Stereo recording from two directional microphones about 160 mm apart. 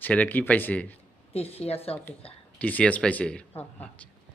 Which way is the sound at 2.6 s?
10° left (ahead or behind).